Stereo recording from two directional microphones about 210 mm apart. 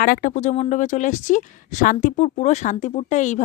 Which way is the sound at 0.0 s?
40° left (ahead or behind).